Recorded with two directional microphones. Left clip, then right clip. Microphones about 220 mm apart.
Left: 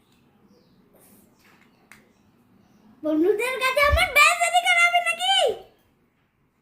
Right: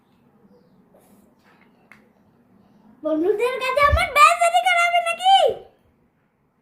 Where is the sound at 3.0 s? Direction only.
20° left (ahead or behind).